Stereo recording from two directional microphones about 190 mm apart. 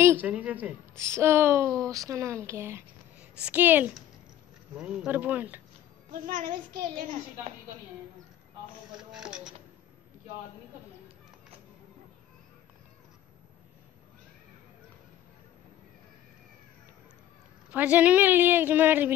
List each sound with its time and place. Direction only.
0.0 s a woman's voice: 10° right (ahead or behind)
6.2 s a woman's voice: 45° right (ahead or behind)
9.1 s speech: 5° right (ahead or behind)
17.6 s speech: 10° right (ahead or behind)